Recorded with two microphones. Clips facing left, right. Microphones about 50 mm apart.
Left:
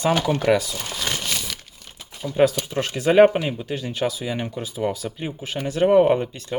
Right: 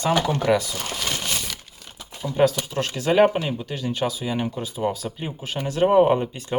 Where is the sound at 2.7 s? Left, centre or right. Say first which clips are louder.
Left 3 dB; centre.